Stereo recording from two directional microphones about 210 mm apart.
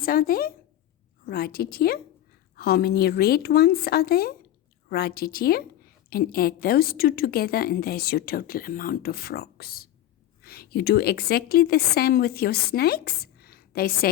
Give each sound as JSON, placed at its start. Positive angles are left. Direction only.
{"t": 0.0, "sound": "a woman's voice", "side_deg": 45}